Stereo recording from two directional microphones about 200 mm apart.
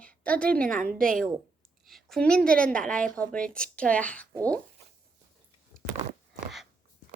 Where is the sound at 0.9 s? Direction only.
45° right (ahead or behind).